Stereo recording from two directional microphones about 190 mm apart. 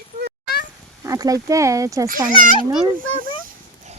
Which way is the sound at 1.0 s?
15° right (ahead or behind).